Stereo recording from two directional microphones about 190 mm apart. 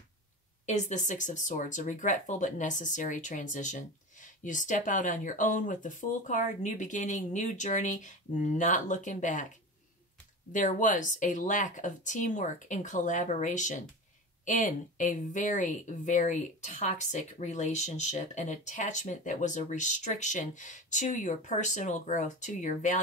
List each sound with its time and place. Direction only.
0.7 s speech: 40° left (ahead or behind)
10.5 s speech: 45° left (ahead or behind)